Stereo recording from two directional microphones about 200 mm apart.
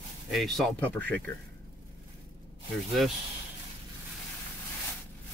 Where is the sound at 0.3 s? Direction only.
Centre (ahead or behind).